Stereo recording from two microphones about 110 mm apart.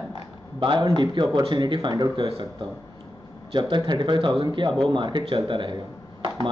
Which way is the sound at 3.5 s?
45° right (ahead or behind).